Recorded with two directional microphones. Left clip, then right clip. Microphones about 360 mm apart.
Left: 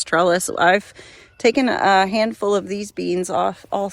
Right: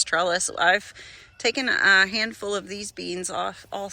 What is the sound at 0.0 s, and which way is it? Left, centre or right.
Speech, centre.